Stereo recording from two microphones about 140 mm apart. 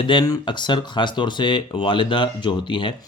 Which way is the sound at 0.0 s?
35° left (ahead or behind).